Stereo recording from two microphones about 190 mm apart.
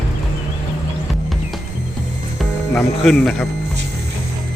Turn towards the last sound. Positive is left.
turn(degrees=5)  # may be behind; listen again after turning